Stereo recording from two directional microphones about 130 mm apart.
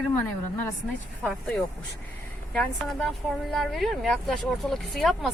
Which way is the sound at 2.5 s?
5° left (ahead or behind).